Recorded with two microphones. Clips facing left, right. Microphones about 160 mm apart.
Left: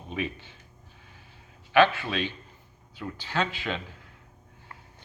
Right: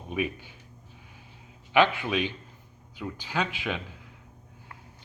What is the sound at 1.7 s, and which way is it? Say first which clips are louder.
Speech: left 1 dB; 15° right (ahead or behind).